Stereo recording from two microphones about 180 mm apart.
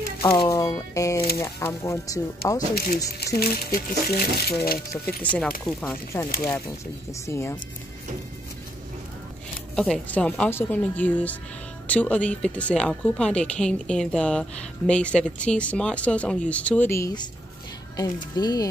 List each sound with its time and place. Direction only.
0.3 s a woman's voice: 20° left (ahead or behind)
2.7 s speech: 55° left (ahead or behind)
5.0 s a woman's voice: 10° left (ahead or behind)
9.8 s a woman's voice: 5° left (ahead or behind)